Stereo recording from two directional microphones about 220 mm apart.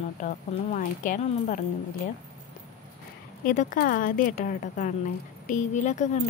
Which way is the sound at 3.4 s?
35° left (ahead or behind).